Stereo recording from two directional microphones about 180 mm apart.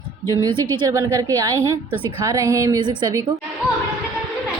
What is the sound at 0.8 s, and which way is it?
A woman's voice, 20° right (ahead or behind).